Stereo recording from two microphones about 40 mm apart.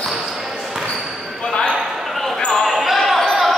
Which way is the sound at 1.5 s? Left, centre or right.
Left.